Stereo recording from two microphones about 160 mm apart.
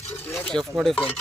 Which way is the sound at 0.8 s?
Centre (ahead or behind).